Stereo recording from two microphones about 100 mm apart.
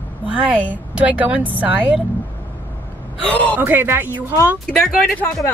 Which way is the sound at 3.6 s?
20° right (ahead or behind).